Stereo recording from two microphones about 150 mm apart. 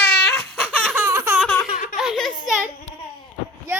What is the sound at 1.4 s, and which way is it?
Baby laughter, 5° left (ahead or behind).